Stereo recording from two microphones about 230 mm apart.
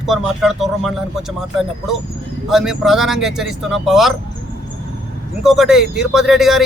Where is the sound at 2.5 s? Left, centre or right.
Centre.